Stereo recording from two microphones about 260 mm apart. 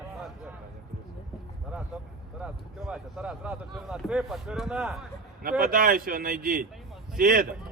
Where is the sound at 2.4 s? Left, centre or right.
Centre.